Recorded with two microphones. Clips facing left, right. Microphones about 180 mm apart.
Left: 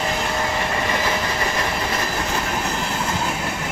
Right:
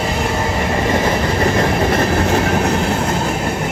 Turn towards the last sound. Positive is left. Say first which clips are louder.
# right 9 dB
turn(degrees=-60)  # may be behind; listen again after turning